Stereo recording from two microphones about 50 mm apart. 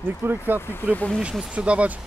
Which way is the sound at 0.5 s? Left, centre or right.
Left.